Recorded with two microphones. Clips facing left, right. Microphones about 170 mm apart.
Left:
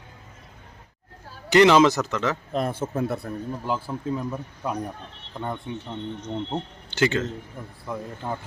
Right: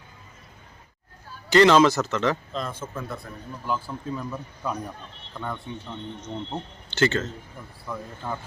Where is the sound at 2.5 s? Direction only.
65° left (ahead or behind).